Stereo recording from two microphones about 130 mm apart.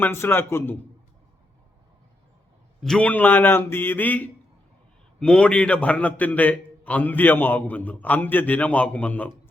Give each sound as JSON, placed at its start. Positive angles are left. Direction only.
{"t": 0.0, "sound": "a man's voice", "side_deg": 20}
{"t": 2.8, "sound": "a man's voice", "side_deg": 5}